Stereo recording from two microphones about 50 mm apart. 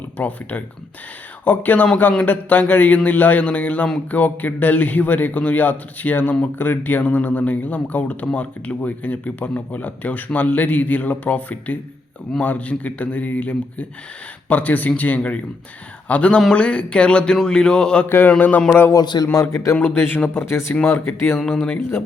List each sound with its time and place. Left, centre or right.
0.2 s a man's voice: left
18.3 s speech: left
18.9 s a man's voice: left
19.7 s speech: left
20.0 s speech: left
20.4 s speech: left
20.8 s speech: left